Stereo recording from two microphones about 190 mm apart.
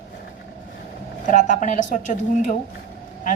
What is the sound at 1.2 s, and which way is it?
A woman's voice, 40° left (ahead or behind).